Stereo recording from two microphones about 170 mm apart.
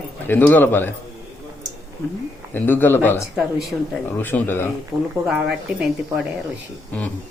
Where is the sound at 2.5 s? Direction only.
10° left (ahead or behind).